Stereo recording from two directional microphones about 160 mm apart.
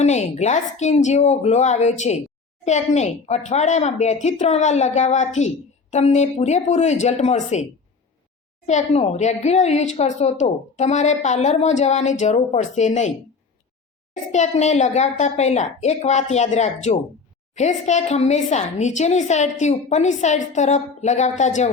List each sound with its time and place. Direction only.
0.0 s a woman's voice: 45° left (ahead or behind)
8.6 s a woman's voice: 45° left (ahead or behind)